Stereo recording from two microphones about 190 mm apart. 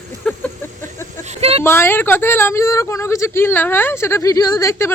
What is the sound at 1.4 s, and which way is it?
Speech, 30° right (ahead or behind).